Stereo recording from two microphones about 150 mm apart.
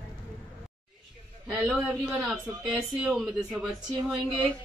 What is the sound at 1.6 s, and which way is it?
A man's voice, 10° right (ahead or behind).